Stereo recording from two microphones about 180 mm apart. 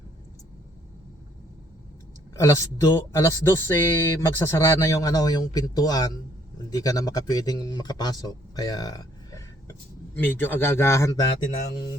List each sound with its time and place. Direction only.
2.4 s speech: 20° left (ahead or behind)
8.5 s a sound: 20° left (ahead or behind)
10.2 s speech: 10° left (ahead or behind)